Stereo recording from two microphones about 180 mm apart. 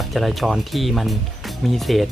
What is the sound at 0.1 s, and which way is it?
Speech, centre (ahead or behind).